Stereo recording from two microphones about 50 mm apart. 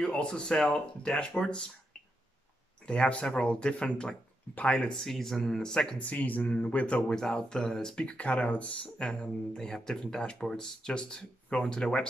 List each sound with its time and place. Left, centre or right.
0.0 s speech: centre
2.8 s speech: centre
4.9 s speech: centre
5.9 s speech: left
7.1 s speech: centre
8.0 s speech: left